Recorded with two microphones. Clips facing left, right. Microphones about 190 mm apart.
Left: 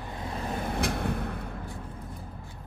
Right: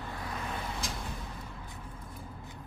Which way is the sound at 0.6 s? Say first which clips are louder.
Left 9 dB; 60° left (ahead or behind).